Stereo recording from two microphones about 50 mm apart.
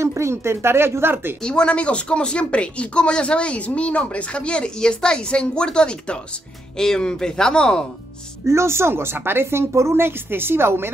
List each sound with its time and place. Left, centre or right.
0.0 s speech: right
1.4 s speech: centre
8.5 s speech: right